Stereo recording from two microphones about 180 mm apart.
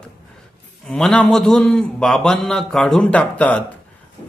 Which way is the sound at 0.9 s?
5° left (ahead or behind).